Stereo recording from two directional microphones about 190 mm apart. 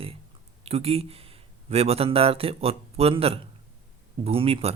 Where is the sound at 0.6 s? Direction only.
30° right (ahead or behind).